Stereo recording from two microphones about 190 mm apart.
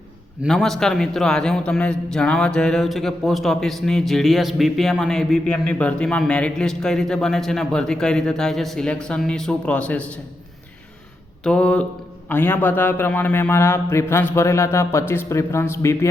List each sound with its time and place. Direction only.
0.4 s a man's voice: centre (ahead or behind)
11.4 s a man's voice: 5° left (ahead or behind)